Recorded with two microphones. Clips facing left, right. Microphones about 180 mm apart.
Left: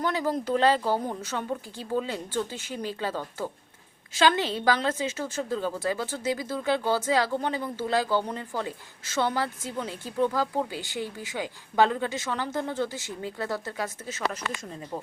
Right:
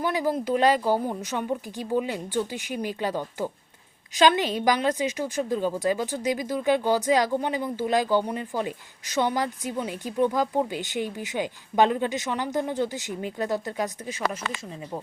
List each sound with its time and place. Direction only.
0.0 s a woman's voice: 10° right (ahead or behind)